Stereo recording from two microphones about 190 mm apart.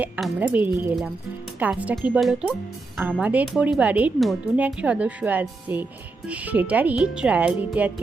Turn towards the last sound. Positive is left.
turn(degrees=-5)  # may be behind; listen again after turning